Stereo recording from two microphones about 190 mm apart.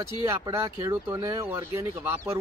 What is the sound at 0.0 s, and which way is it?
Speech, 15° right (ahead or behind).